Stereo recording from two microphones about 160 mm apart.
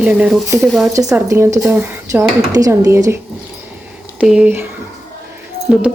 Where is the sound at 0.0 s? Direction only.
5° right (ahead or behind).